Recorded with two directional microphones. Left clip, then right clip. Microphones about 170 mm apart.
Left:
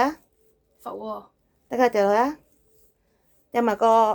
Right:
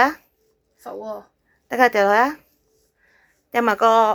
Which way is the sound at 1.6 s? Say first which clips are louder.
Right 4 dB; 5° left (ahead or behind).